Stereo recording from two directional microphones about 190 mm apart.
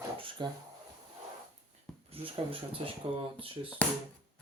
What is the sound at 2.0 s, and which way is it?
Speech, 30° right (ahead or behind).